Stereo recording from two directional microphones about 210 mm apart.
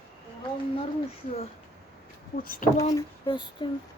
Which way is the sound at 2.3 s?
40° left (ahead or behind).